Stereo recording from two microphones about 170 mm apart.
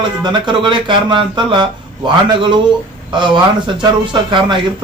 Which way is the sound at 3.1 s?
30° right (ahead or behind).